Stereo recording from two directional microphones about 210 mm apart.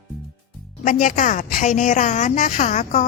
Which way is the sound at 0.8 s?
40° left (ahead or behind).